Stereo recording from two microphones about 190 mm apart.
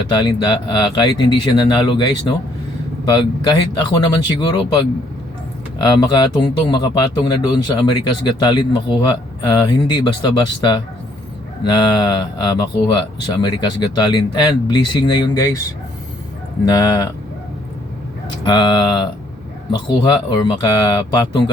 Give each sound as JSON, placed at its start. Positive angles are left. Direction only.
{"t": 0.1, "sound": "speech", "side_deg": 25}
{"t": 16.6, "sound": "speech", "side_deg": 20}
{"t": 18.4, "sound": "speech", "side_deg": 25}